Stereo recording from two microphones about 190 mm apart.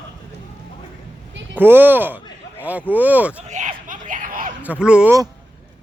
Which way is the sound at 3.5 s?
40° right (ahead or behind).